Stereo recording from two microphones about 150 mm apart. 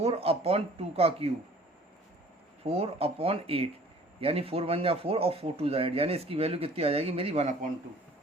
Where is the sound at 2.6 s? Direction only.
40° right (ahead or behind).